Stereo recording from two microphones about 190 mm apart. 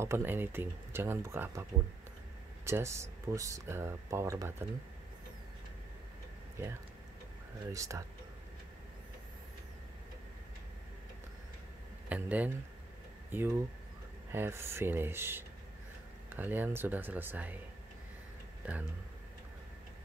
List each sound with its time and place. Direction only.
0.0 s speech: 10° right (ahead or behind)
7.7 s speech: 15° right (ahead or behind)
12.1 s speech: 10° right (ahead or behind)
18.6 s speech: 5° right (ahead or behind)